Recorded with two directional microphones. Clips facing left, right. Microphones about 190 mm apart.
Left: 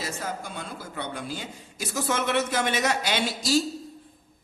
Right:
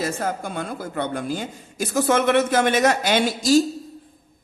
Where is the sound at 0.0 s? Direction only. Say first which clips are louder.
Right 8 dB; 55° right (ahead or behind).